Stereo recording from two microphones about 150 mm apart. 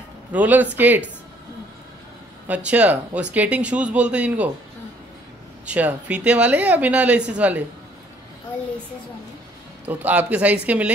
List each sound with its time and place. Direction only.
0.3 s speech: 10° right (ahead or behind)
2.4 s speech: 10° right (ahead or behind)
5.7 s speech: 10° right (ahead or behind)
9.8 s speech: 10° right (ahead or behind)